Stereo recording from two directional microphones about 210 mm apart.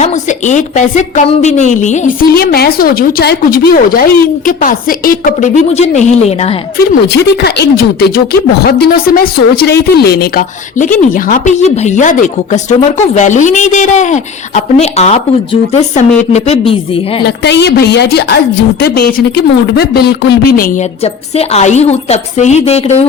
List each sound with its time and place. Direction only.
0.0 s speech: 35° left (ahead or behind)
6.7 s a woman's voice: 50° left (ahead or behind); by 17.2 s 25° left (ahead or behind)
17.2 s speech: 55° left (ahead or behind)
21.0 s speech: 30° left (ahead or behind)